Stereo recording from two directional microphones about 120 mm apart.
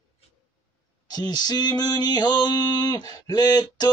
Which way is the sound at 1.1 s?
35° left (ahead or behind).